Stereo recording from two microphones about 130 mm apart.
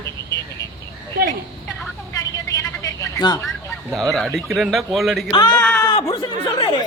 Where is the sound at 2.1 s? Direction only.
25° left (ahead or behind).